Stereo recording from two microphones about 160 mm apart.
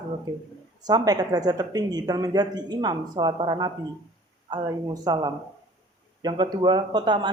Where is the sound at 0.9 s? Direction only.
25° right (ahead or behind).